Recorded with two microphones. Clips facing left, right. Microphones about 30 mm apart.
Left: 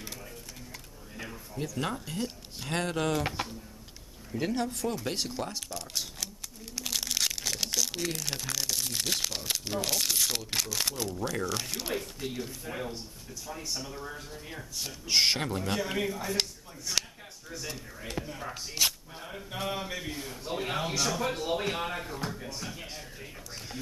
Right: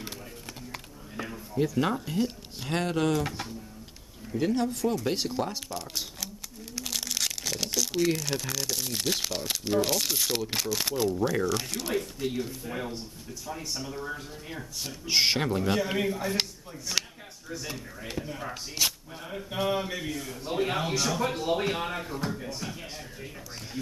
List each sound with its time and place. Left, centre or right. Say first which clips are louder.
1.1 s speech: right 8 dB; centre
3.4 s a man's voice: left 2 dB; centre
4.3 s speech: right 4 dB; centre
5.0 s a sound: right 4 dB; centre
8.2 s speech: right 3 dB; centre
11.4 s speech: right 4 dB; centre
20.1 s a man's voice: right 3 dB; centre
20.4 s speech: right 4 dB; centre